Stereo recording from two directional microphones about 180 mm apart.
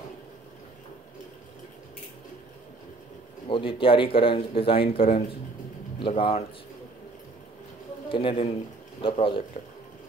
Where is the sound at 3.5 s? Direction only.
30° left (ahead or behind).